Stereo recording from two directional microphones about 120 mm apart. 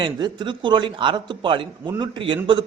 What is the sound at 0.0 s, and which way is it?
A man's voice, 40° right (ahead or behind).